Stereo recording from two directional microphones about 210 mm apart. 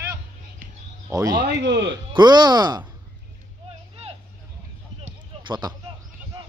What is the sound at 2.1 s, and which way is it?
Speech, 20° right (ahead or behind).